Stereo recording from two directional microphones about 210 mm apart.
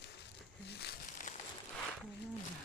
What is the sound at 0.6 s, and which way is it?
Crumpling, 50° left (ahead or behind).